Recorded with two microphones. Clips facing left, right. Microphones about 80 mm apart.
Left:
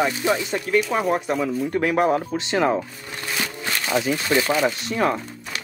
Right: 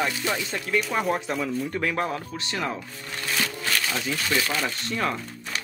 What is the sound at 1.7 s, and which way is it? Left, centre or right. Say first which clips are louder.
Speech: left 7 dB; centre.